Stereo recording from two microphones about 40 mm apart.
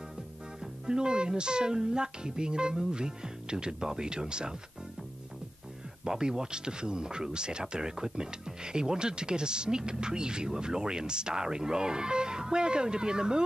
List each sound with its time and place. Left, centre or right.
0.6 s speech: centre
6.0 s speech: centre